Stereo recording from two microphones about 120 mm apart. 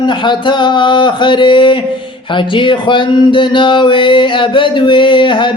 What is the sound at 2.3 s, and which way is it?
Speech, 45° left (ahead or behind).